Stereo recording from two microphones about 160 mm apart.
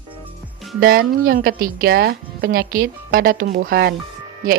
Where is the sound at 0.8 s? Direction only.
65° right (ahead or behind).